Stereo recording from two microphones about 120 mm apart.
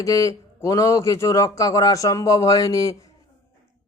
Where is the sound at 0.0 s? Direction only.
30° left (ahead or behind).